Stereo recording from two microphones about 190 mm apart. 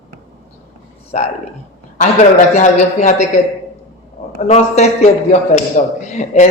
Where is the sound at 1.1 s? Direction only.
40° left (ahead or behind).